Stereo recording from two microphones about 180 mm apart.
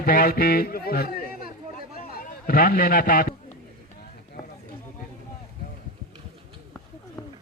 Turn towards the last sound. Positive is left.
turn(degrees=20)  # may be behind; listen again after turning